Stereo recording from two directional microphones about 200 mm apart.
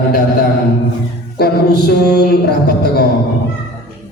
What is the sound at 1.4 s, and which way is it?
Speech, 55° left (ahead or behind).